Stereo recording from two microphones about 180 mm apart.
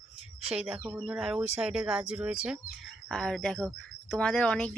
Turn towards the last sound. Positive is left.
turn(degrees=5)  # may be behind; listen again after turning